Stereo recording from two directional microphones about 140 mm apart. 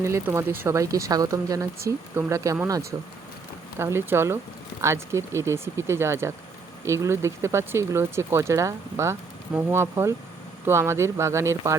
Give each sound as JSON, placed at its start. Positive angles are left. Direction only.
{"t": 0.0, "sound": "speech", "side_deg": -20}